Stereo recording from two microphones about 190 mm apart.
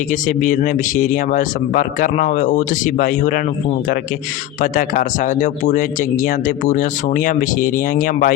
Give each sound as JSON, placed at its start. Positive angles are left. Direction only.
{"t": 0.1, "sound": "speech", "side_deg": 45}
{"t": 4.6, "sound": "speech", "side_deg": 45}